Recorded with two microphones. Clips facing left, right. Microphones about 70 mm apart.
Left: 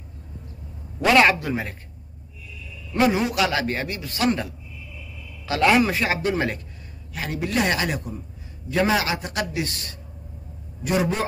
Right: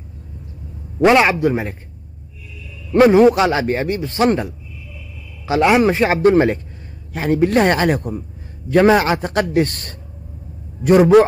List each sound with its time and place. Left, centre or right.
1.2 s speech: centre
2.9 s a man's voice: right
3.3 s speech: right
5.9 s a man's voice: right
11.1 s a sound: right